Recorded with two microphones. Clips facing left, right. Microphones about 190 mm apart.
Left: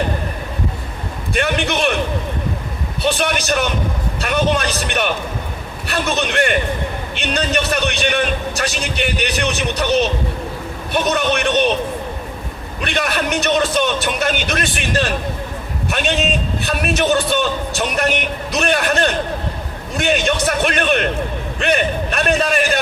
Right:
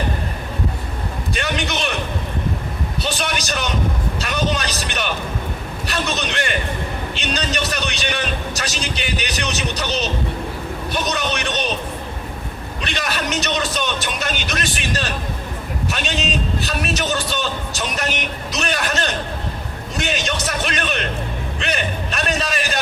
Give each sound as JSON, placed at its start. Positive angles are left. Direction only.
{"t": 1.3, "sound": "a sound", "side_deg": 55}
{"t": 3.0, "sound": "a man's voice", "side_deg": 55}
{"t": 12.8, "sound": "a man's voice", "side_deg": 55}